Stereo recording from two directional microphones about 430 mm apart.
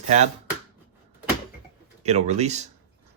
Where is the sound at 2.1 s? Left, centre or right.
Centre.